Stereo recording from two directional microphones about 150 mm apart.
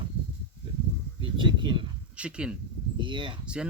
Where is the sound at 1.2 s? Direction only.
30° right (ahead or behind).